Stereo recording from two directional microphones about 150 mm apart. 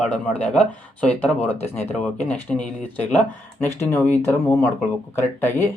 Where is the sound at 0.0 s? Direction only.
10° left (ahead or behind).